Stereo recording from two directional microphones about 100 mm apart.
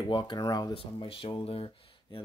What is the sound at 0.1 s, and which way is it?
Speech, 50° left (ahead or behind).